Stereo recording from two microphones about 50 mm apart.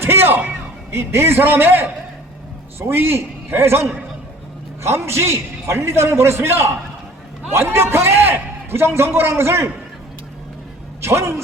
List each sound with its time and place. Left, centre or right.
0.0 s a sound: right
0.9 s a man's voice: right
11.0 s speech: right